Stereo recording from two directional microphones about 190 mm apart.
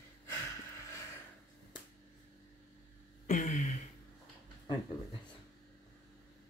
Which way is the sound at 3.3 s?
40° left (ahead or behind).